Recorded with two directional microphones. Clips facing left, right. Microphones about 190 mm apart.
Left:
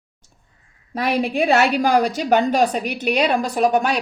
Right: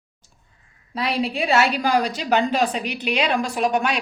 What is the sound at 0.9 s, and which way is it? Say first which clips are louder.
A woman's voice: left 4 dB; 50° left (ahead or behind).